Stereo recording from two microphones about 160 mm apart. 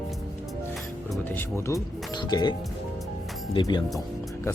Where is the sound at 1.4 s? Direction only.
15° left (ahead or behind).